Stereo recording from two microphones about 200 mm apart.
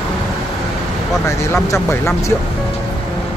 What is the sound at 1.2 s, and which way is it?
Speech, 15° left (ahead or behind).